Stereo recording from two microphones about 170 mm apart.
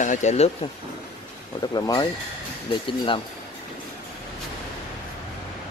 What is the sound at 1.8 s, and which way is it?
Speech, 20° left (ahead or behind).